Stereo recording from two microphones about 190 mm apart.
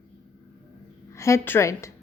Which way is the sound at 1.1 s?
15° left (ahead or behind).